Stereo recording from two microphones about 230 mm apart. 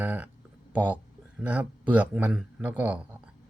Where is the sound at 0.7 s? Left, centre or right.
Centre.